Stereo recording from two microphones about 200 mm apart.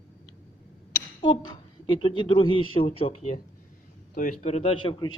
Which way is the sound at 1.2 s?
25° left (ahead or behind).